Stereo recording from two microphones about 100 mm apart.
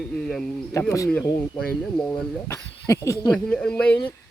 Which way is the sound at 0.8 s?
30° left (ahead or behind).